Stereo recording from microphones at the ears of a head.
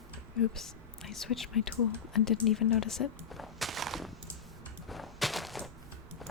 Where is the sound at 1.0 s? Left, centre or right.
Left.